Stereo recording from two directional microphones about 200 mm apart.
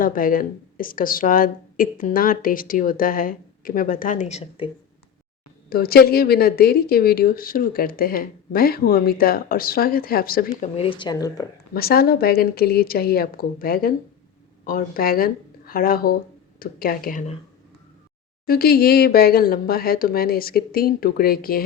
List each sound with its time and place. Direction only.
0.0 s speech: 45° left (ahead or behind)
5.6 s speech: 50° left (ahead or behind)
10.6 s speech: 30° left (ahead or behind)
11.7 s speech: 50° left (ahead or behind)
18.4 s speech: 50° left (ahead or behind)